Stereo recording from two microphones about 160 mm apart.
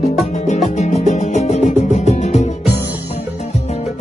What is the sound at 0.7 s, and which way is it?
Music, 45° left (ahead or behind).